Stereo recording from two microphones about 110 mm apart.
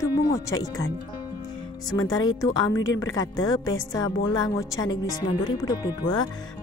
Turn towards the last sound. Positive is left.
turn(degrees=40)  # may be behind; listen again after turning